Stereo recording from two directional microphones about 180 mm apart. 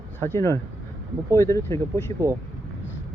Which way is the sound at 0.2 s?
15° left (ahead or behind).